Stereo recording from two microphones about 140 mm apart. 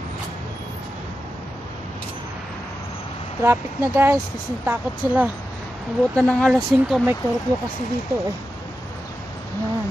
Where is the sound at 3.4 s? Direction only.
20° right (ahead or behind).